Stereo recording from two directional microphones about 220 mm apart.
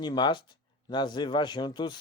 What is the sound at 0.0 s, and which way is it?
A man's voice, 20° left (ahead or behind).